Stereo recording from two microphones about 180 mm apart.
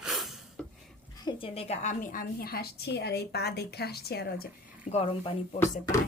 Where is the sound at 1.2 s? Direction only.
30° left (ahead or behind); by 4.9 s 60° left (ahead or behind).